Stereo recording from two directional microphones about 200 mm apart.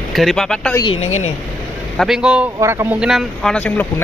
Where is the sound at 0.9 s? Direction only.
90° left.